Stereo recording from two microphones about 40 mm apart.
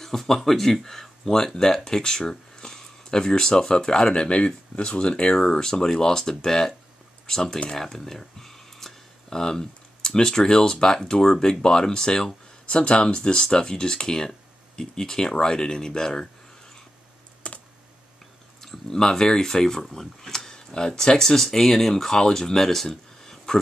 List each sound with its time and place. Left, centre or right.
0.0 s speech: centre
17.4 s computer keyboard: left
18.6 s speech: centre